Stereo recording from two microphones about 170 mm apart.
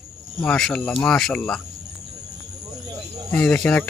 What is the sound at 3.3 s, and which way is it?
Speech, 5° left (ahead or behind).